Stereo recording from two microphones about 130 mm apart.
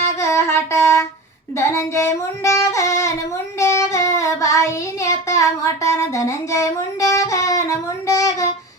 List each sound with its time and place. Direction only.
0.2 s a sound: 20° left (ahead or behind)
1.5 s singing: 20° left (ahead or behind)
3.6 s child singing: 20° left (ahead or behind)